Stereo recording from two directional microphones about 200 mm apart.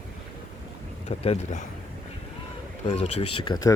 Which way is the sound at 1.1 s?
35° left (ahead or behind).